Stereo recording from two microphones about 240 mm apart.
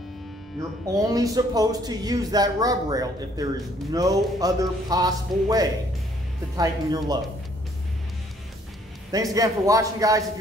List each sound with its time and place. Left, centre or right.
0.6 s speech: centre
9.1 s speech: centre